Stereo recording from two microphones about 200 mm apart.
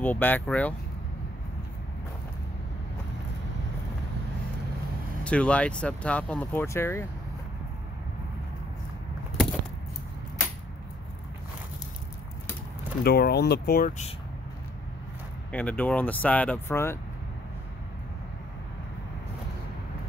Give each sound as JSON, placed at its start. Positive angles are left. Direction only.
{"t": 0.0, "sound": "speech", "side_deg": 10}
{"t": 5.2, "sound": "speech", "side_deg": 5}
{"t": 13.0, "sound": "speech", "side_deg": 50}
{"t": 15.5, "sound": "speech", "side_deg": 5}